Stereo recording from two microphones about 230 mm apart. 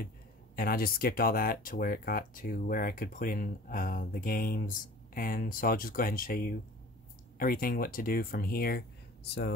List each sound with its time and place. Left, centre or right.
0.6 s speech: left